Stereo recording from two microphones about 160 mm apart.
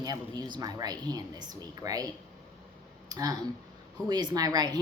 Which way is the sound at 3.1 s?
25° right (ahead or behind).